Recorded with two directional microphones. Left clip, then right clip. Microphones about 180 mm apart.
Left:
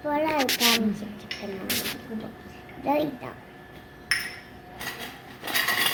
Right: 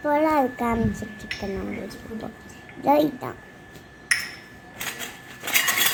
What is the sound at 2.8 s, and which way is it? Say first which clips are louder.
Speech: right 6 dB; 50° right (ahead or behind).